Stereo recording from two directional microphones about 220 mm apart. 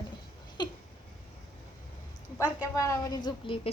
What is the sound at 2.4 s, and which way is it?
A woman's voice, 15° left (ahead or behind).